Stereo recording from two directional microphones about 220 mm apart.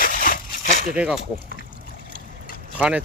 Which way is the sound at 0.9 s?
5° right (ahead or behind).